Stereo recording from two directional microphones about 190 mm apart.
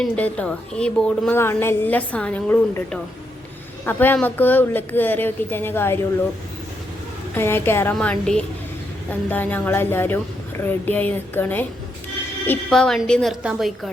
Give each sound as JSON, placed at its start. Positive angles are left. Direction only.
{"t": 0.0, "sound": "a woman's voice", "side_deg": 5}
{"t": 7.3, "sound": "a woman's voice", "side_deg": 10}